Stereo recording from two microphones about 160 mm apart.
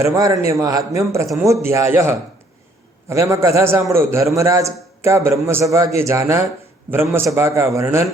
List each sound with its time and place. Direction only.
0.0 s a man's voice: 20° right (ahead or behind)